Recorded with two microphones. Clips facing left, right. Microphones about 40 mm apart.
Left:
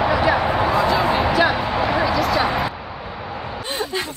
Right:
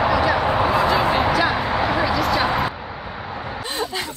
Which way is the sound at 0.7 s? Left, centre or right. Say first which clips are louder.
Even; centre.